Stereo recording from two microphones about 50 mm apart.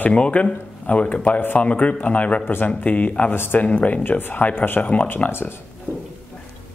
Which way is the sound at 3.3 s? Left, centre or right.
Left.